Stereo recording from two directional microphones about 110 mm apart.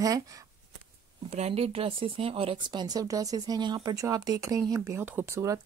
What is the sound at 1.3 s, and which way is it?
Speech, 70° right (ahead or behind).